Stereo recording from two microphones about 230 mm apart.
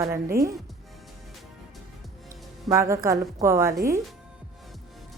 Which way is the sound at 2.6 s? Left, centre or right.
Centre.